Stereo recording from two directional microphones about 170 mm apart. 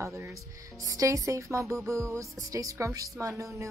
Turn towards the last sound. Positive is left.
turn(degrees=-20)  # may be behind; listen again after turning